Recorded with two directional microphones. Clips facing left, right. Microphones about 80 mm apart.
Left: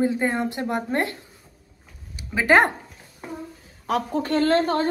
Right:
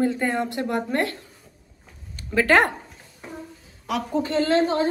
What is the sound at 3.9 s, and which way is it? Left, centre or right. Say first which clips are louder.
Speech: left 1 dB; left.